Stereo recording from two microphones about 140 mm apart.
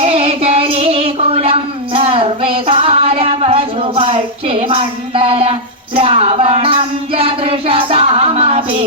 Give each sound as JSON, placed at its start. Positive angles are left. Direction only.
{"t": 0.0, "sound": "child singing", "side_deg": -45}